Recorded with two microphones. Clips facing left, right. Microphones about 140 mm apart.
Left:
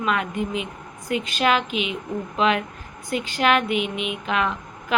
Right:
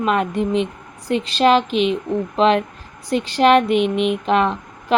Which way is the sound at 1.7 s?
5° left (ahead or behind).